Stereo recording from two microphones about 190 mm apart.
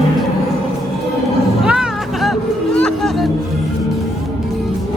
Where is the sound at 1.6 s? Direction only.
5° right (ahead or behind).